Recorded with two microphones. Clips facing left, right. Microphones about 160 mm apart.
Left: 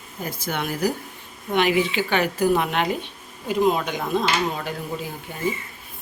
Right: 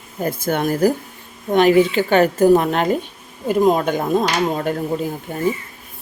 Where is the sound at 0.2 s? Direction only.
50° right (ahead or behind).